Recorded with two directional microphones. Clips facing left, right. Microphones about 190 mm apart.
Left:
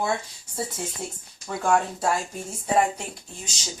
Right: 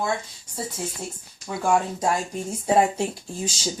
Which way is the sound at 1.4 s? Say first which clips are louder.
Right 1 dB; 5° right (ahead or behind).